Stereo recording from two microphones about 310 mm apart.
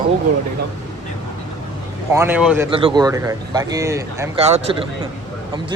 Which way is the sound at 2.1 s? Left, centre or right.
Centre.